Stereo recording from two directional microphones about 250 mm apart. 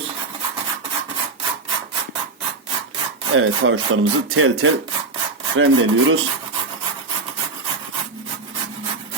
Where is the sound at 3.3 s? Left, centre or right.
Right.